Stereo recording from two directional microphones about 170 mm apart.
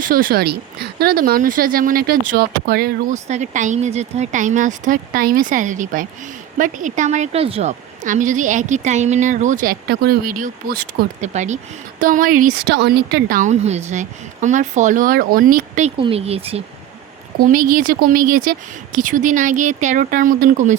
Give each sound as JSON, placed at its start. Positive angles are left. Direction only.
{"t": 0.0, "sound": "speech", "side_deg": -55}
{"t": 3.2, "sound": "speech", "side_deg": -45}
{"t": 8.0, "sound": "speech", "side_deg": -50}
{"t": 11.3, "sound": "speech", "side_deg": -45}
{"t": 16.0, "sound": "speech", "side_deg": -35}
{"t": 17.4, "sound": "speech", "side_deg": -55}